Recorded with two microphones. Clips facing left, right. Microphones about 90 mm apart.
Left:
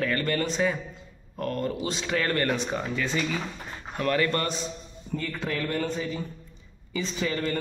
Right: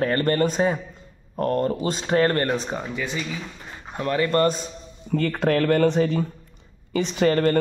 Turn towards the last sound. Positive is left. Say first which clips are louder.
# right 9 dB
turn(degrees=-55)  # may be behind; listen again after turning